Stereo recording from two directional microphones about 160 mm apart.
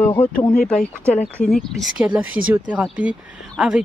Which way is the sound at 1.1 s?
45° left (ahead or behind).